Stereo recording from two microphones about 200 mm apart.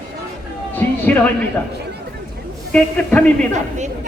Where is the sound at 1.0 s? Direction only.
10° left (ahead or behind).